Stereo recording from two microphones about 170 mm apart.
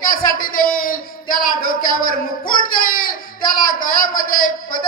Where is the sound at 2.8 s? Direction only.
55° left (ahead or behind).